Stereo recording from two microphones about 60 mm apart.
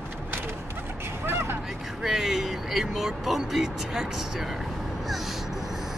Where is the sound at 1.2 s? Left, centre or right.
Right.